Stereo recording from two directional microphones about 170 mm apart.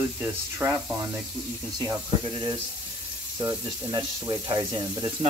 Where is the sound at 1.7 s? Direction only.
25° right (ahead or behind).